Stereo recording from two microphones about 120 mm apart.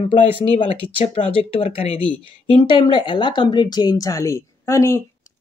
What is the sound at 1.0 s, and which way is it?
Speech, 50° left (ahead or behind).